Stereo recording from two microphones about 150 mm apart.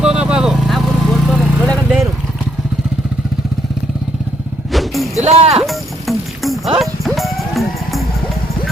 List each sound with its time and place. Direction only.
0.0 s vehicle: 5° right (ahead or behind)
4.7 s music: centre (ahead or behind)
5.2 s music: 45° right (ahead or behind)
5.5 s music: centre (ahead or behind)